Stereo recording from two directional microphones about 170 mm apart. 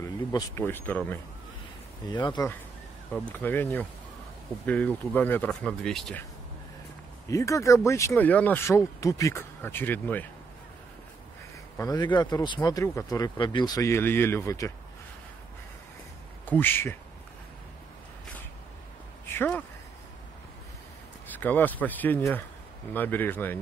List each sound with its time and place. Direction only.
0.0 s speech: 20° left (ahead or behind)
2.0 s speech: 25° left (ahead or behind)
3.1 s speech: 10° left (ahead or behind)
7.2 s speech: 20° left (ahead or behind)
11.7 s speech: 20° left (ahead or behind)
16.4 s speech: 10° left (ahead or behind)
19.2 s a sound: 10° left (ahead or behind)
21.3 s speech: 10° left (ahead or behind)